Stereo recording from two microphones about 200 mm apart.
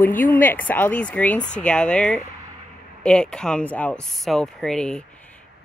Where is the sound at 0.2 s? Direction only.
10° left (ahead or behind).